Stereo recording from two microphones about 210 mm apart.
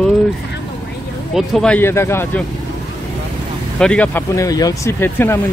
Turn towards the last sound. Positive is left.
turn(degrees=10)  # may be behind; listen again after turning